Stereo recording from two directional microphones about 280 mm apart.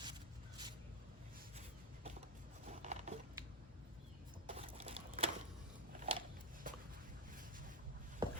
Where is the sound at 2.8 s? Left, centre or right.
Right.